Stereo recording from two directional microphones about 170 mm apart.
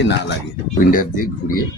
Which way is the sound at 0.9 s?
55° left (ahead or behind).